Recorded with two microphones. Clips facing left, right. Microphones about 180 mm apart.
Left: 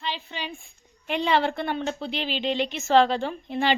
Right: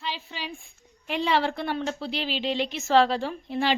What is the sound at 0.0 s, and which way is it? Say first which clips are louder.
A woman's voice: left 2 dB; 5° right (ahead or behind).